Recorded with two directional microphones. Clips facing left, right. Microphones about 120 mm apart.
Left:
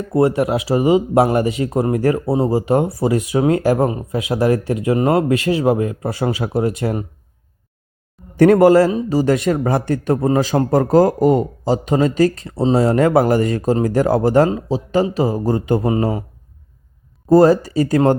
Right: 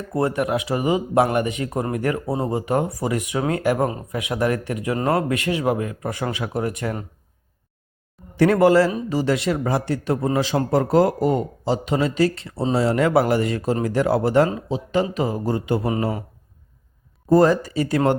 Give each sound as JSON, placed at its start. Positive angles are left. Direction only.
{"t": 0.1, "sound": "speech", "side_deg": 25}
{"t": 8.4, "sound": "a man's voice", "side_deg": 40}
{"t": 17.2, "sound": "a man's voice", "side_deg": 35}